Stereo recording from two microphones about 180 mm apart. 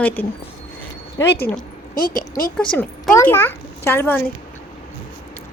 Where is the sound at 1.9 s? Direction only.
50° left (ahead or behind).